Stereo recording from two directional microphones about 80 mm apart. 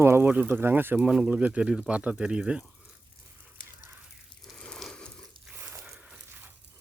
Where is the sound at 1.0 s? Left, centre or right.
Centre.